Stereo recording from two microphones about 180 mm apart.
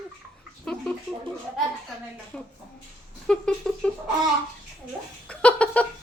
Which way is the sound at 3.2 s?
5° left (ahead or behind).